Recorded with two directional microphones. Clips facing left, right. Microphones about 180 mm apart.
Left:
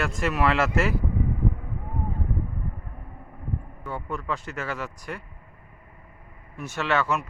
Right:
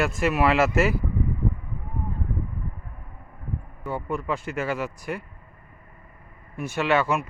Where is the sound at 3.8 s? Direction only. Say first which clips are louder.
Right 4 dB; 10° right (ahead or behind).